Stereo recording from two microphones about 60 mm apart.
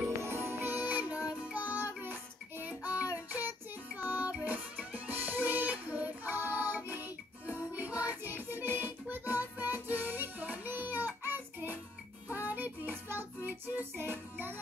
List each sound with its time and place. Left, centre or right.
0.2 s music: right
0.7 s music: right
3.3 s child singing: right
4.1 s music: right